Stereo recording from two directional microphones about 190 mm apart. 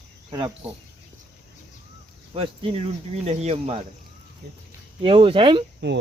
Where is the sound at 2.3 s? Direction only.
30° right (ahead or behind).